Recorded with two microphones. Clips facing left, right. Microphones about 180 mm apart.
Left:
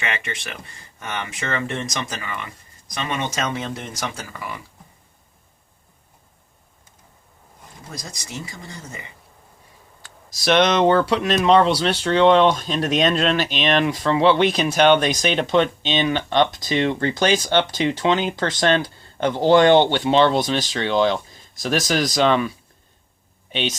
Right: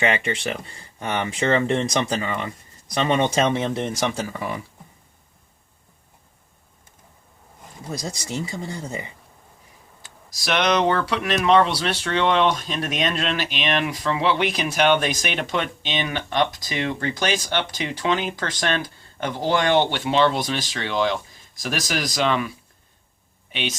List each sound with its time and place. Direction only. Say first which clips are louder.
0.1 s speech: right 6 dB; 35° right (ahead or behind)
10.2 s speech: left 4 dB; 25° left (ahead or behind)